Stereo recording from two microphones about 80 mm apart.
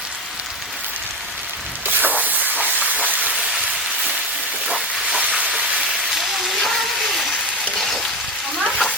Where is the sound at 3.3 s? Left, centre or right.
Centre.